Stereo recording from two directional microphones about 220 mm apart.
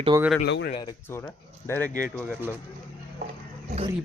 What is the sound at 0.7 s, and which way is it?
Speech, 20° left (ahead or behind).